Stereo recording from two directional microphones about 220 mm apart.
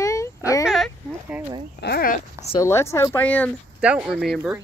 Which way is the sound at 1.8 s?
45° left (ahead or behind).